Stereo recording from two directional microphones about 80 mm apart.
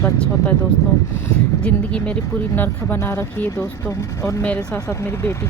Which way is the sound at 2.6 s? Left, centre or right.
Left.